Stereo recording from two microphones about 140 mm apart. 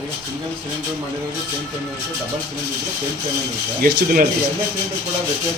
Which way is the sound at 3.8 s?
85° right.